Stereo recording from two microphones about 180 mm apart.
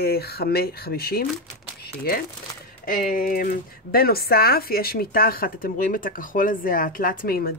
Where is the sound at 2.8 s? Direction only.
50° left (ahead or behind).